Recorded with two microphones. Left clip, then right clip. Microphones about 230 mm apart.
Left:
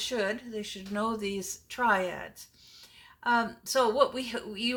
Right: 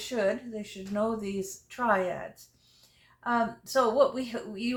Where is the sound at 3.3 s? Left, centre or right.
Left.